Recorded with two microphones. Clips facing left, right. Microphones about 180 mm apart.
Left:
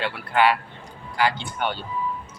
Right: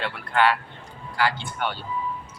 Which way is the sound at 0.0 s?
10° left (ahead or behind).